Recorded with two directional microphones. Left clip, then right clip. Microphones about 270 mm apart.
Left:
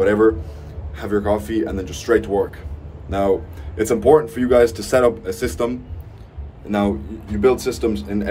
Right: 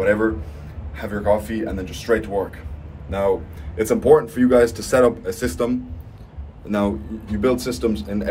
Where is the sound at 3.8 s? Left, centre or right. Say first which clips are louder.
Left 1 dB; centre.